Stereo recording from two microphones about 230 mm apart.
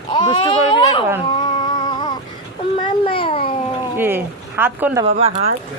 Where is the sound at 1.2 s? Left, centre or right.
Centre.